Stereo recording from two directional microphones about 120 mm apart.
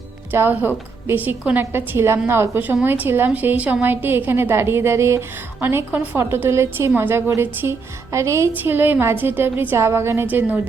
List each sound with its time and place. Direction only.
0.3 s a woman's voice: 15° right (ahead or behind)